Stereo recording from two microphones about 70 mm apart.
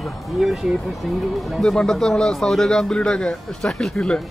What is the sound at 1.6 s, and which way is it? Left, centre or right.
Speech, centre.